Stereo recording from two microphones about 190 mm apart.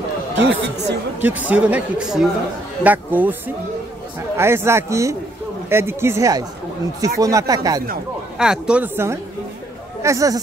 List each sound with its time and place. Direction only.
0.4 s speech: 75° right (ahead or behind)
1.2 s speech: 10° right (ahead or behind)
8.4 s speech: 5° right (ahead or behind)